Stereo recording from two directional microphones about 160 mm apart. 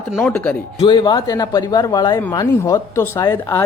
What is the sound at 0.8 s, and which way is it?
A man's voice, 30° left (ahead or behind).